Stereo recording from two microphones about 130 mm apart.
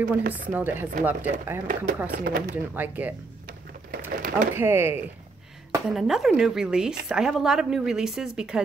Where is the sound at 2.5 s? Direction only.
15° right (ahead or behind).